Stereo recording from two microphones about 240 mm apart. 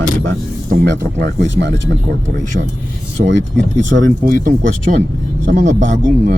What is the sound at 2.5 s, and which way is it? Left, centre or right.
Speech, right.